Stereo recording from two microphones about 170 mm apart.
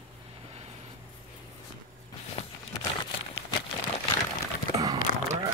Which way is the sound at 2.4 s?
35° left (ahead or behind).